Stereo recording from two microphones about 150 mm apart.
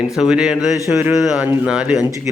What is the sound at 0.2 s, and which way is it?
Speech, 5° right (ahead or behind).